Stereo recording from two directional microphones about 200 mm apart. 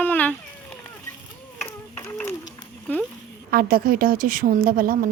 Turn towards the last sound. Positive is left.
turn(degrees=-45)  # may be behind; listen again after turning